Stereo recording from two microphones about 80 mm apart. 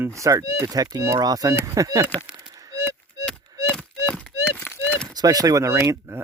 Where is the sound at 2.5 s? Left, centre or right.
Right.